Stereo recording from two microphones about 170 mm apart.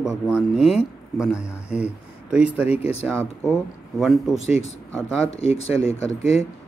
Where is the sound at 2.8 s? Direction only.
35° left (ahead or behind).